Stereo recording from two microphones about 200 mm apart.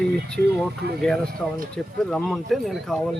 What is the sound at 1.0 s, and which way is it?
Speech, 5° left (ahead or behind).